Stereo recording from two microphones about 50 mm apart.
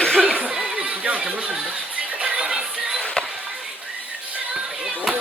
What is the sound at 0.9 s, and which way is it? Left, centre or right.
Chatter, right.